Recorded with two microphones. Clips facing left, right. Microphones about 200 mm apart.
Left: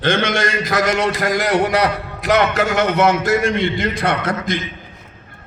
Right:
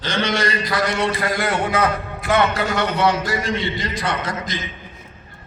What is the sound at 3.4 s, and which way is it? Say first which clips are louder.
A man's voice: left 5 dB; 55° left (ahead or behind).